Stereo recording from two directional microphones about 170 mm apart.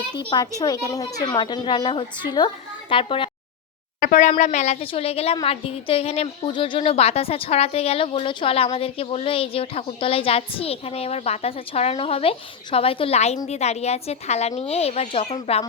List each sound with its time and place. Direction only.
0.2 s a woman's voice: 30° left (ahead or behind)
4.0 s a woman's voice: 45° left (ahead or behind)